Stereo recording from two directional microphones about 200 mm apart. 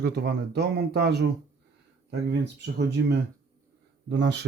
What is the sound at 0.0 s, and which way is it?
Speech, 55° right (ahead or behind).